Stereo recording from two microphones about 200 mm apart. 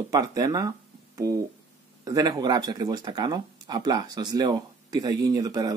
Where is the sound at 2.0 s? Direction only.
20° right (ahead or behind).